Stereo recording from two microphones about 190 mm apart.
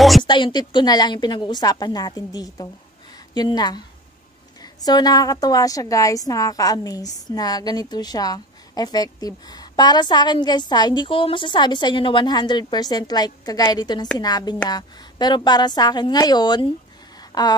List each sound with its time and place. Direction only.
0.2 s a woman's voice: 25° left (ahead or behind)